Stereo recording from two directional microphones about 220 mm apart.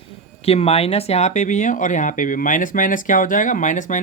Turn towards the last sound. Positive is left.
turn(degrees=35)  # may be behind; listen again after turning